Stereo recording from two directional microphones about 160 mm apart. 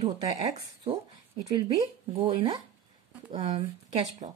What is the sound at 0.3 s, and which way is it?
Speech, 40° right (ahead or behind).